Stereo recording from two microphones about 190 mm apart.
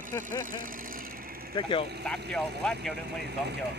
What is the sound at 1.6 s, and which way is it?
Speech, 25° left (ahead or behind).